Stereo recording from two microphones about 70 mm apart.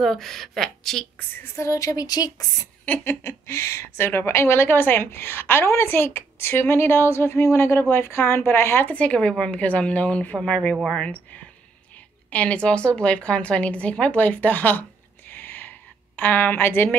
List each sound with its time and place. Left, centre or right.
0.0 s speech: centre
1.6 s speech: left
2.8 s a woman's voice: left
8.8 s speech: centre
12.3 s a woman's voice: centre
15.3 s a sound: left
16.2 s a woman's voice: left